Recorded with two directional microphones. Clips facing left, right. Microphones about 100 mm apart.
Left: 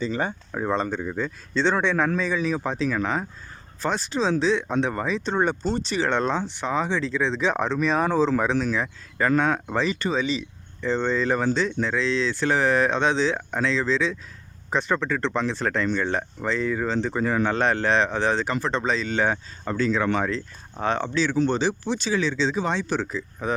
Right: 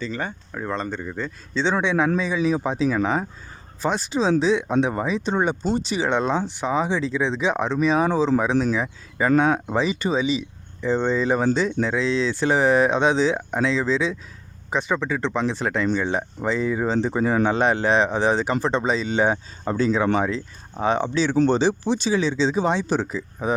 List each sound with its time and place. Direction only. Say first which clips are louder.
0.0 s speech: left 2 dB; 20° left (ahead or behind)
1.0 s speech: left 2 dB; 5° left (ahead or behind); by 23.6 s 15° right (ahead or behind)